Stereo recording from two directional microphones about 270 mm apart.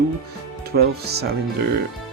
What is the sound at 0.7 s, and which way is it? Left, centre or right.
Speech, right.